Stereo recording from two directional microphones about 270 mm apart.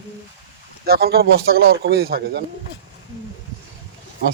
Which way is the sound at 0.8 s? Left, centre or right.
Right.